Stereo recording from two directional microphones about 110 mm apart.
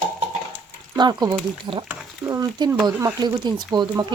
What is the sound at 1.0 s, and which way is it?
Speech, 40° right (ahead or behind).